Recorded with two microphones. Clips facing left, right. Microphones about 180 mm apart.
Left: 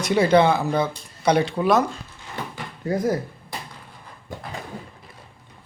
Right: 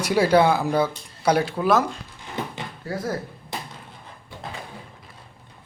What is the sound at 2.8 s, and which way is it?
Speech, 15° left (ahead or behind).